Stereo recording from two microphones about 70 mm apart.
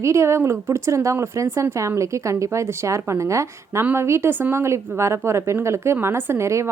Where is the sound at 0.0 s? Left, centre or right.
Right.